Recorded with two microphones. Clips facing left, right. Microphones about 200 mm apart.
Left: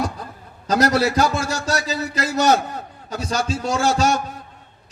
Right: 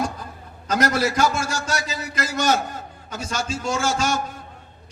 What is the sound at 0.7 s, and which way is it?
A man's voice, 35° left (ahead or behind).